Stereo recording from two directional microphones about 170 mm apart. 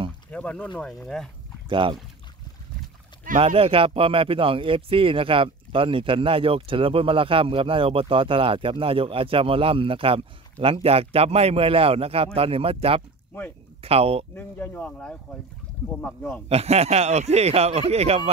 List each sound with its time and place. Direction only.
0.3 s speech: 5° left (ahead or behind)
1.7 s speech: 30° right (ahead or behind)
3.3 s speech: 35° right (ahead or behind)
14.3 s speech: 10° left (ahead or behind)
16.4 s speech: 40° right (ahead or behind)